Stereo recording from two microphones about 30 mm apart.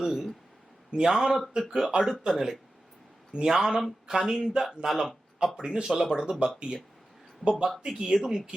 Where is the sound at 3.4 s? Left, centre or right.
Right.